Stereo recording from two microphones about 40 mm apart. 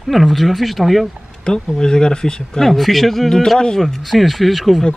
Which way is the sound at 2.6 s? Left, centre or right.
Centre.